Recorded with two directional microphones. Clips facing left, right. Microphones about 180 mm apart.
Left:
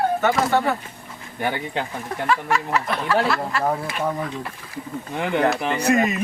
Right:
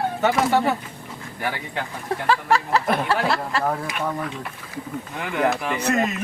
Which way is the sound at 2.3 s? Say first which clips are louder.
Right 2 dB; 35° right (ahead or behind).